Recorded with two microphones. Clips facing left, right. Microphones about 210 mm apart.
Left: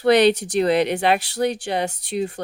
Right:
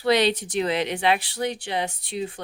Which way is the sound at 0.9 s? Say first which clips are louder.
Left 3 dB; 45° left (ahead or behind).